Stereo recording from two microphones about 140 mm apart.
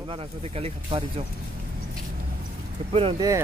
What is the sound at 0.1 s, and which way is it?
Speech, 45° right (ahead or behind).